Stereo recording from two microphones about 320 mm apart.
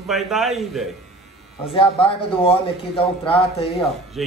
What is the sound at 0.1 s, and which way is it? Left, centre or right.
Speech, centre.